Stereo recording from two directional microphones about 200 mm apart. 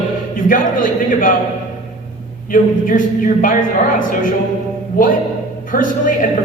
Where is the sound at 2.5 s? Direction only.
40° left (ahead or behind).